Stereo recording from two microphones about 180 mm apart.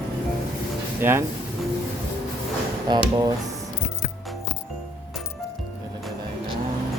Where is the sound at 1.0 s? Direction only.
15° right (ahead or behind).